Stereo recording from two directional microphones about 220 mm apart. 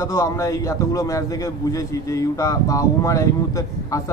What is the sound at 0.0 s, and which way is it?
A man's voice, 15° left (ahead or behind).